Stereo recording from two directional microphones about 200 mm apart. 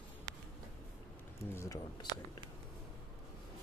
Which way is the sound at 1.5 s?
15° left (ahead or behind).